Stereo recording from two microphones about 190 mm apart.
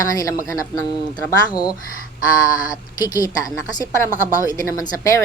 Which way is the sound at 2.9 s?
20° left (ahead or behind).